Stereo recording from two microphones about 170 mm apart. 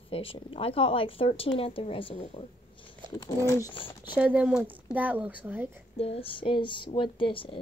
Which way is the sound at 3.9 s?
25° left (ahead or behind).